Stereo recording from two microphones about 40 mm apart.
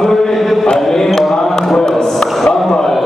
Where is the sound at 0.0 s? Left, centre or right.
Centre.